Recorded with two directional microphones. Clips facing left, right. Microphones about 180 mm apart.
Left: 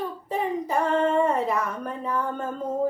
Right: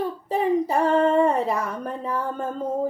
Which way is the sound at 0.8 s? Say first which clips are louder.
Right 3 dB; 30° right (ahead or behind).